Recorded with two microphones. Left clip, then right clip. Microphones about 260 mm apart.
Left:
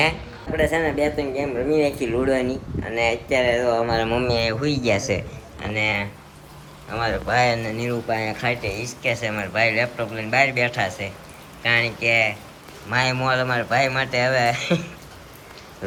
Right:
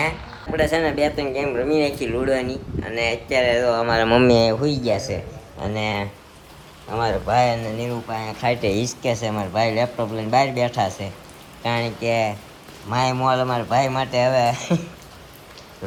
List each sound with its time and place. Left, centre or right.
0.5 s speech: centre
3.8 s speech: right
4.4 s speech: centre
8.1 s speech: right
8.4 s speech: centre